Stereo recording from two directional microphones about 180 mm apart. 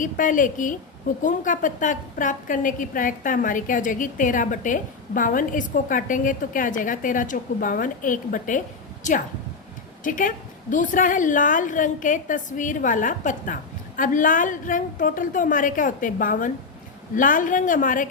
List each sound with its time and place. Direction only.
0.0 s a woman's voice: 45° left (ahead or behind)